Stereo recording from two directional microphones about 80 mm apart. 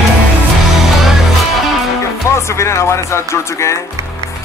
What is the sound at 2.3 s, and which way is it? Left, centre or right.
Speech, left.